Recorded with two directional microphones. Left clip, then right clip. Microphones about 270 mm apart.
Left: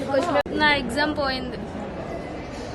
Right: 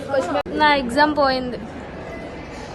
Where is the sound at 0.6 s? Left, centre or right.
Centre.